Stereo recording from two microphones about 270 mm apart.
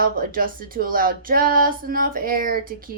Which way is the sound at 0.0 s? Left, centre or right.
Right.